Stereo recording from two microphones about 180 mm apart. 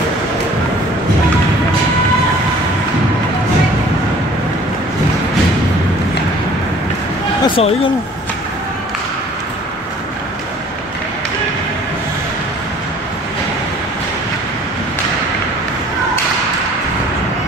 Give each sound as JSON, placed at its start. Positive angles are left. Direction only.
{"t": 7.4, "sound": "speech", "side_deg": 30}